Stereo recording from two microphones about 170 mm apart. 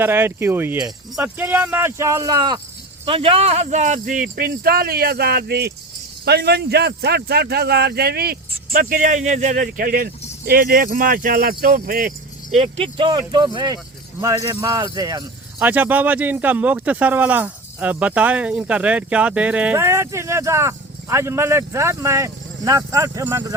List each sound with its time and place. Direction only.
0.0 s speech: 15° right (ahead or behind); by 12.1 s 55° right (ahead or behind)
12.5 s speech: 35° right (ahead or behind)
15.5 s speech: 10° right (ahead or behind)